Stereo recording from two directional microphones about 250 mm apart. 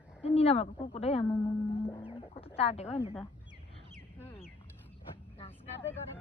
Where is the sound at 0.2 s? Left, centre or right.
Left.